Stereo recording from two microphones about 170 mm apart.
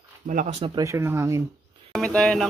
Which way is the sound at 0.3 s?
50° right (ahead or behind).